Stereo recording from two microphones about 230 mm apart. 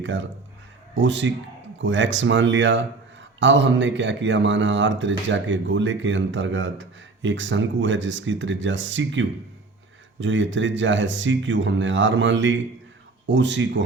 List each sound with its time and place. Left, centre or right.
0.0 s speech: right